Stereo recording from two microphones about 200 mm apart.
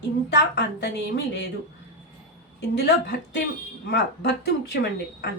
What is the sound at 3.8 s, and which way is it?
Speech, 55° left (ahead or behind).